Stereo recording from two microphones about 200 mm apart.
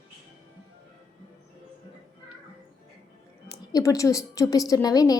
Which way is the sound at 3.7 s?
15° left (ahead or behind).